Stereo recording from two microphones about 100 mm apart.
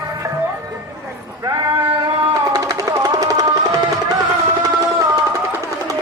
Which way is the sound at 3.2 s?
35° right (ahead or behind).